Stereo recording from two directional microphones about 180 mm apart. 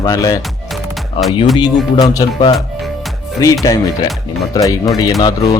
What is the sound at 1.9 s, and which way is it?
Speech, 20° left (ahead or behind).